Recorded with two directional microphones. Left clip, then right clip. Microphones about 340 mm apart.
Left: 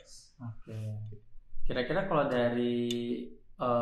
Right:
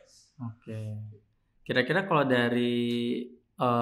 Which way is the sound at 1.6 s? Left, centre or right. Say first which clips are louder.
Right 5 dB; right.